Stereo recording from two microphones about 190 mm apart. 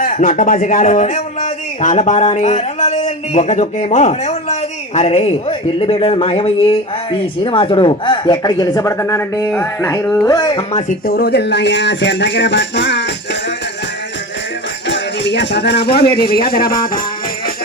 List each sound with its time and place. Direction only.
0.0 s speech: 45° left (ahead or behind)
11.0 s speech: 55° left (ahead or behind)
14.8 s speech: 70° left (ahead or behind); by 17.0 s 50° left (ahead or behind)